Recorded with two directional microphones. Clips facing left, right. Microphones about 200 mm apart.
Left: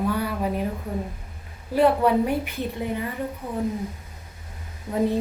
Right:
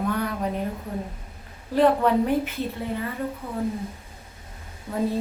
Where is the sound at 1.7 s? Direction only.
10° left (ahead or behind).